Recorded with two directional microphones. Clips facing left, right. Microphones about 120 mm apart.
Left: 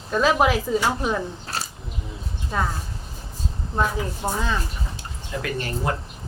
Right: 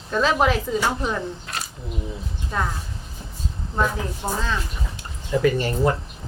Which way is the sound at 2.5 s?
Centre (ahead or behind).